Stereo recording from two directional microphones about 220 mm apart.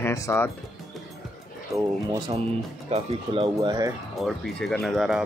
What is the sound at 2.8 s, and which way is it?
Speech, 25° right (ahead or behind).